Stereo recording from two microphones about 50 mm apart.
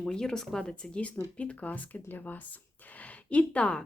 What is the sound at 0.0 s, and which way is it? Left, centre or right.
Speech, centre.